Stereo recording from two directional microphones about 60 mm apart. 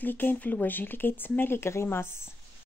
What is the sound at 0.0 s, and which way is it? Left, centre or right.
Speech, left.